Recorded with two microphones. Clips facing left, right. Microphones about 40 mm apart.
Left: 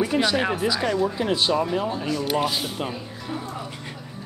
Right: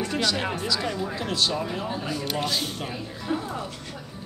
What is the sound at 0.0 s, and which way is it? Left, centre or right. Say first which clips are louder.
Speech: left 5 dB; centre.